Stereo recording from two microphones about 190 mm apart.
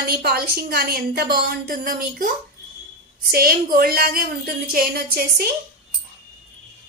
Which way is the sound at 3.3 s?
50° right (ahead or behind).